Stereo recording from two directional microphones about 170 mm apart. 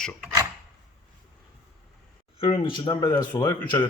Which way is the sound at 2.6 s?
30° left (ahead or behind).